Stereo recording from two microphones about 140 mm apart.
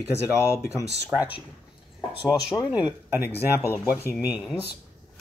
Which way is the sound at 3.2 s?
15° left (ahead or behind).